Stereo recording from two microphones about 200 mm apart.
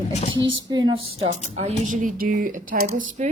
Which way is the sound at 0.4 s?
20° right (ahead or behind).